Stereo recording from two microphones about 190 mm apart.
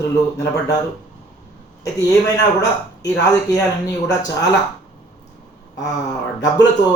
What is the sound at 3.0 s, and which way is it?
A man's voice, 15° left (ahead or behind).